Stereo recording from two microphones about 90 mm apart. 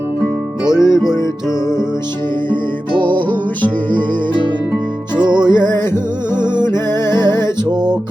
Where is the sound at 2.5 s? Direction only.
65° right (ahead or behind).